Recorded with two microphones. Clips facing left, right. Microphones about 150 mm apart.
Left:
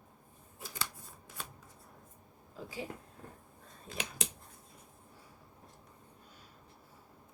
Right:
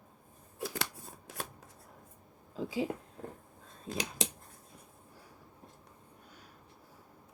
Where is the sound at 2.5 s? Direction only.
90° right.